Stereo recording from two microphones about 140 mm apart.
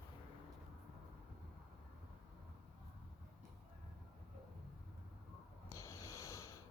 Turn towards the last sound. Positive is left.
turn(degrees=20)  # may be behind; listen again after turning